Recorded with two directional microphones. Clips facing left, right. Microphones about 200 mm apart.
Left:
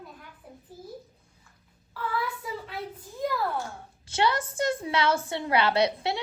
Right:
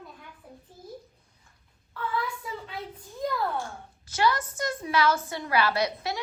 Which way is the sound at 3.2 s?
Centre (ahead or behind).